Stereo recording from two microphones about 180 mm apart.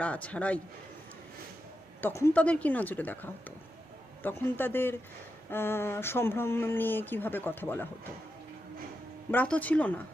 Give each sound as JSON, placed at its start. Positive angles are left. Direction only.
{"t": 0.0, "sound": "speech", "side_deg": 5}
{"t": 2.0, "sound": "speech", "side_deg": 10}
{"t": 9.3, "sound": "speech", "side_deg": 10}